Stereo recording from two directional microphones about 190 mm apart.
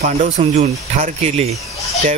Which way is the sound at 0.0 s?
40° right (ahead or behind).